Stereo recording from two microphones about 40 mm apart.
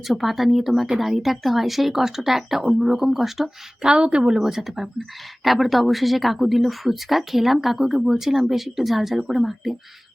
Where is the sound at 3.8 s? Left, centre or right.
Right.